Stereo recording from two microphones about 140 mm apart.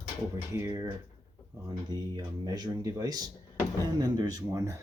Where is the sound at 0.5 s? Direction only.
25° right (ahead or behind).